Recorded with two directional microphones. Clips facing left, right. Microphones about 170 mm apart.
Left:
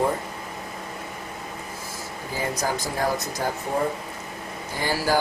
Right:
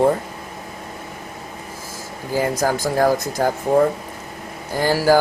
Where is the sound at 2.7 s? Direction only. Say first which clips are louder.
Right 8 dB; 90° right.